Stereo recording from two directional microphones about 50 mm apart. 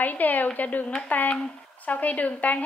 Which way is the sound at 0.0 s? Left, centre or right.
Left.